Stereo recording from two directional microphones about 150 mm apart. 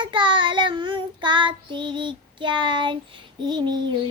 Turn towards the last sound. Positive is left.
turn(degrees=-30)  # may be behind; listen again after turning